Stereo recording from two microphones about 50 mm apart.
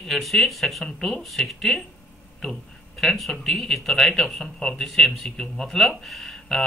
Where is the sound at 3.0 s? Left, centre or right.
Centre.